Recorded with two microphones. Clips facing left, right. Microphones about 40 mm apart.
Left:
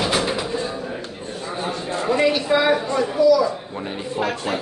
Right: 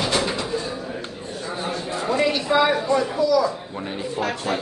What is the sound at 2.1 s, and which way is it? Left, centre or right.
Speech, centre.